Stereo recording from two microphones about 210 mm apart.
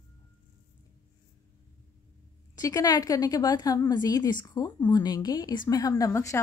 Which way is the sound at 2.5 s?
15° left (ahead or behind).